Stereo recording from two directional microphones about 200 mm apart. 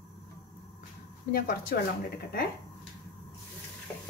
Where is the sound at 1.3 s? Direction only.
50° left (ahead or behind).